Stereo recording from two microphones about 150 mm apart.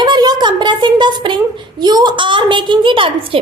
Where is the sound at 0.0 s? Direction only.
30° right (ahead or behind).